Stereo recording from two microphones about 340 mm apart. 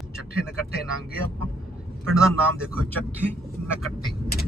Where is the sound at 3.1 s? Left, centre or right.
Centre.